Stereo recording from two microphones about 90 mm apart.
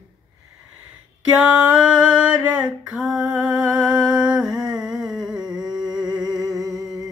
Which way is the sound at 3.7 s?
10° right (ahead or behind).